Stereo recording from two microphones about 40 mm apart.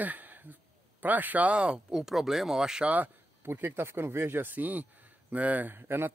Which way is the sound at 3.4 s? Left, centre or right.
Right.